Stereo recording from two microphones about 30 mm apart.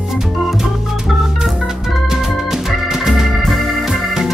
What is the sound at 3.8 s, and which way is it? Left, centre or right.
Music, centre.